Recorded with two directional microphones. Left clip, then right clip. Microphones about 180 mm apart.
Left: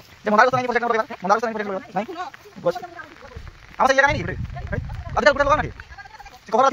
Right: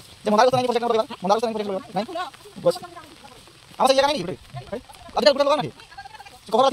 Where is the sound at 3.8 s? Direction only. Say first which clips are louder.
Left 1 dB; 10° right (ahead or behind).